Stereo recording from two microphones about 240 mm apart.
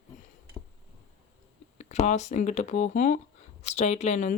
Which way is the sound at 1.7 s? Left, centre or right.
Left.